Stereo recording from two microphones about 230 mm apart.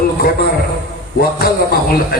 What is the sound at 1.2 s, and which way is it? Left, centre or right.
A man's voice, left.